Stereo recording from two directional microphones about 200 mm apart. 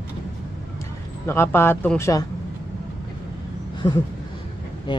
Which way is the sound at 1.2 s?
10° left (ahead or behind).